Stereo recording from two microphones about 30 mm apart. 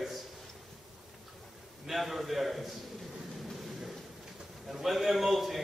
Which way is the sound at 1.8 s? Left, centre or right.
Centre.